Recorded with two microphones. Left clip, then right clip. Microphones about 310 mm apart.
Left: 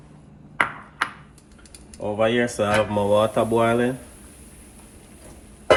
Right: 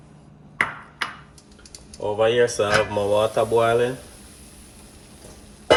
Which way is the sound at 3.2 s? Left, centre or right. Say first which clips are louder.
Right 1 dB; left.